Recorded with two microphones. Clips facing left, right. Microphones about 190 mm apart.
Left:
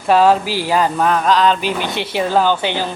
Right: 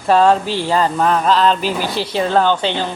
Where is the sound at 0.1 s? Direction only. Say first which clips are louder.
Even; 5° left (ahead or behind).